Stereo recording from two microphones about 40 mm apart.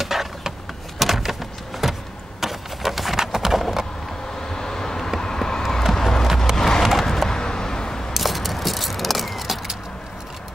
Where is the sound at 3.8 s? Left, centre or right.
Centre.